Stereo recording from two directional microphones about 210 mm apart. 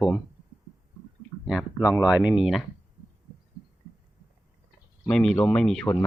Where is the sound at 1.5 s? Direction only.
5° right (ahead or behind).